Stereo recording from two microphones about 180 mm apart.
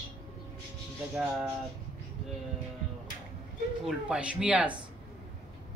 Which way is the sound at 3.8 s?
5° right (ahead or behind).